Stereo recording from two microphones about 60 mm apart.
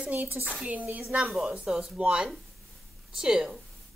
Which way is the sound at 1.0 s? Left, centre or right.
Centre.